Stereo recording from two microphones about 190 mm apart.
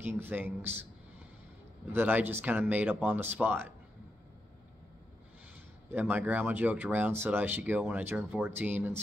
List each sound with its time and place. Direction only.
0.0 s speech: 10° right (ahead or behind)
1.9 s speech: 10° right (ahead or behind)
5.9 s speech: 10° right (ahead or behind)